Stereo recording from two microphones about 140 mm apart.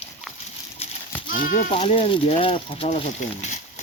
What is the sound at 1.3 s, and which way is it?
Speech, 75° left (ahead or behind).